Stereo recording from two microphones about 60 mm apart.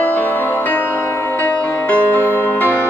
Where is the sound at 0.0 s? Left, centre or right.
Left.